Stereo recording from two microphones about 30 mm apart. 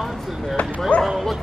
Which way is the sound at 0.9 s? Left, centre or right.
Left.